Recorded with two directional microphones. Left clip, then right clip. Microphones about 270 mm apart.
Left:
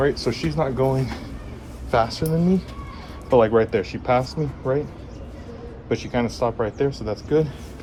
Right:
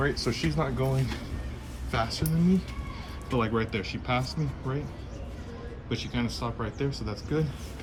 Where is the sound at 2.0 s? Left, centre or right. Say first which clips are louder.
Left 9 dB; centre.